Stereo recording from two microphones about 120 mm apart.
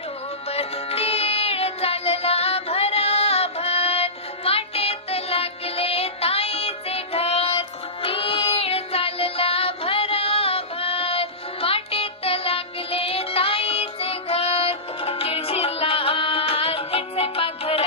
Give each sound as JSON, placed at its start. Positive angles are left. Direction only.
{"t": 0.4, "sound": "music", "side_deg": 55}
{"t": 8.0, "sound": "child singing", "side_deg": 50}